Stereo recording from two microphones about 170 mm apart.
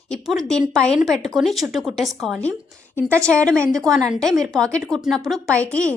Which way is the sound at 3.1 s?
15° right (ahead or behind).